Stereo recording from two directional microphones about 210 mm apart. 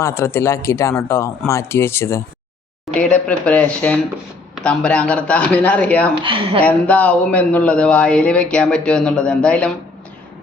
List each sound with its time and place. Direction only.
0.0 s speech: 10° left (ahead or behind)
6.2 s a woman's voice: 25° right (ahead or behind)
6.6 s speech: 5° left (ahead or behind)